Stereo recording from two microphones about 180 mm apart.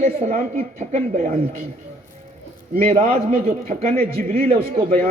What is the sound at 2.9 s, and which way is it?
A woman's voice, 45° right (ahead or behind).